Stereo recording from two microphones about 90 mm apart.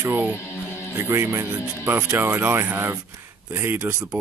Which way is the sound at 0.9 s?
25° right (ahead or behind).